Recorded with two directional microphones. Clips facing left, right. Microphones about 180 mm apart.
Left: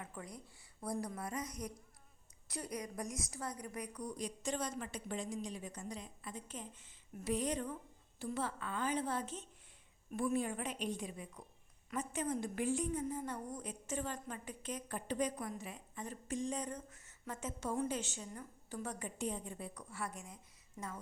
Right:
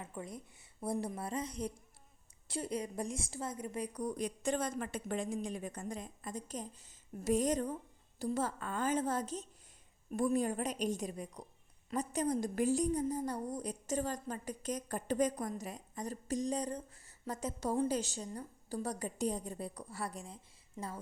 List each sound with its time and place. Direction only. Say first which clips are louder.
0.0 s a woman's voice: right 4 dB; 25° right (ahead or behind)
3.9 s a woman's voice: right 5 dB; 50° right (ahead or behind); by 21.0 s 30° right (ahead or behind)